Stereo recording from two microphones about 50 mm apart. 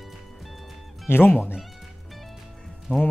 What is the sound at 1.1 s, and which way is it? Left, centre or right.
Speech, left.